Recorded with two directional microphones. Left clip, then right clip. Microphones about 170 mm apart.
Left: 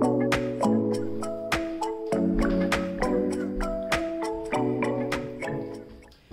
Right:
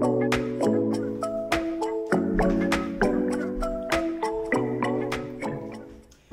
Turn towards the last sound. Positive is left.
turn(degrees=0)  # may be behind; listen again after turning